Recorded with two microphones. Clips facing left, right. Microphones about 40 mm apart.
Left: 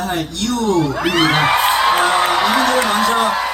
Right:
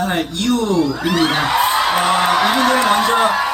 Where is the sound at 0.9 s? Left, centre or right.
Left.